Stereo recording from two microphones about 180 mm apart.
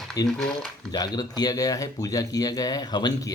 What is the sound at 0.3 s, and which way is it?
Speech, centre (ahead or behind).